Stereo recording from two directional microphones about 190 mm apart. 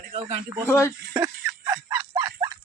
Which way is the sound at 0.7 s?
15° left (ahead or behind).